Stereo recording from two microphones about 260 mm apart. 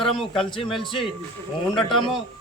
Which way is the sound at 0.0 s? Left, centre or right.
Centre.